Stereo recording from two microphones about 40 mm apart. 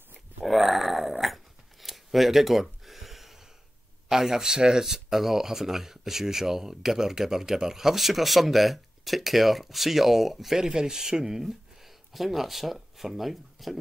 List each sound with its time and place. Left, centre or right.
0.4 s dog: centre
4.1 s speech: centre
10.6 s speech: centre